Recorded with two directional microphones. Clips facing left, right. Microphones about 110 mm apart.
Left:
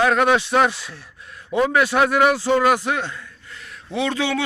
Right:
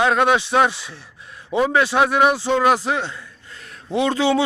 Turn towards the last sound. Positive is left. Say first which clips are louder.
# right 4 dB
turn(degrees=-30)  # may be behind; listen again after turning